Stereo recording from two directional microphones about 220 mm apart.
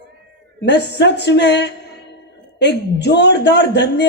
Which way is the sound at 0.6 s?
50° left (ahead or behind).